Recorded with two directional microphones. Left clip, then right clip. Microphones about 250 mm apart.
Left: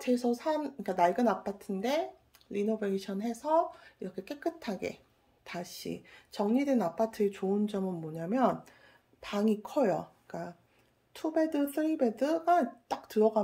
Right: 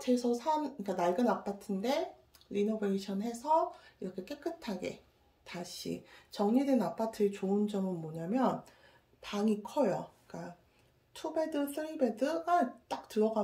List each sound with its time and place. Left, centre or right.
0.0 s speech: centre